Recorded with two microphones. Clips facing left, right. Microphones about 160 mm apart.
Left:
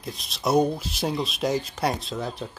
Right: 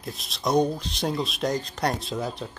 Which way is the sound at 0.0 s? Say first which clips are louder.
Left 1 dB; centre (ahead or behind).